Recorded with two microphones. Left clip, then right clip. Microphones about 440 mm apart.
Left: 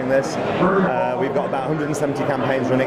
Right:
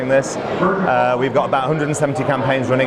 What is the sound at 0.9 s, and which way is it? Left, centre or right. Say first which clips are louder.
Speech: right 5 dB; right.